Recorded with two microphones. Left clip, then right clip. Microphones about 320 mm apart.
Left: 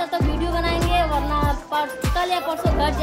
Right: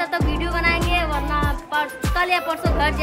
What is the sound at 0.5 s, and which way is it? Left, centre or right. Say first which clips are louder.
Speech: right 1 dB; centre.